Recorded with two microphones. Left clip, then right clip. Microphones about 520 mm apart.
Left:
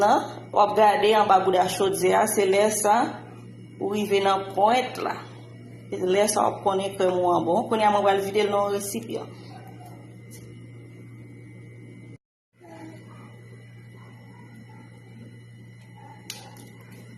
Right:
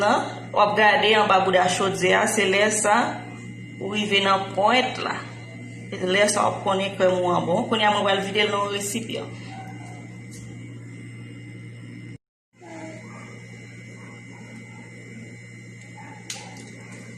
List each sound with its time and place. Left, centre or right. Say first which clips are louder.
0.0 s speech: left 1 dB; left